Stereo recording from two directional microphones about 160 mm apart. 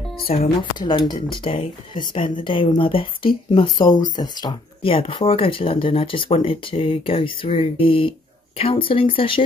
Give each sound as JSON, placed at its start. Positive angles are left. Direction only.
{"t": 0.3, "sound": "speech", "side_deg": 40}
{"t": 0.7, "sound": "speech", "side_deg": 30}